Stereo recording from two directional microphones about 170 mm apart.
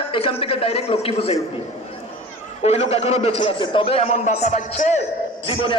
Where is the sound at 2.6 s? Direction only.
35° left (ahead or behind).